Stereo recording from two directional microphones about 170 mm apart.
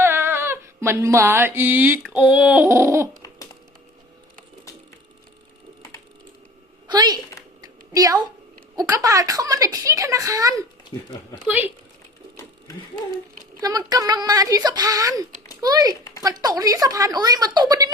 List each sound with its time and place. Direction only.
0.0 s a sound: 15° right (ahead or behind)
3.2 s typing: 20° left (ahead or behind)
6.8 s speech: 25° right (ahead or behind)
7.6 s a sound: 20° right (ahead or behind)
8.7 s a woman's voice: 20° right (ahead or behind)
10.9 s speech: 25° left (ahead or behind)
11.4 s speech: 10° right (ahead or behind)
13.6 s a woman's voice: 20° right (ahead or behind)